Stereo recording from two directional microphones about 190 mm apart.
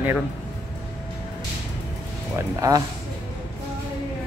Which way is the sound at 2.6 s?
20° right (ahead or behind).